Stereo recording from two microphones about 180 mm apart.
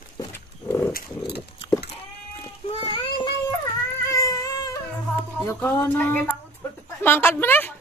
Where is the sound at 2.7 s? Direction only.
30° left (ahead or behind).